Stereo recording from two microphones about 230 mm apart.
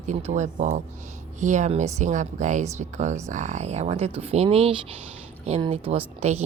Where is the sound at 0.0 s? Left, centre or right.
Right.